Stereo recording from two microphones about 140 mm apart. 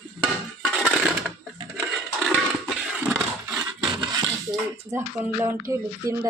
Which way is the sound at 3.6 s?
35° right (ahead or behind).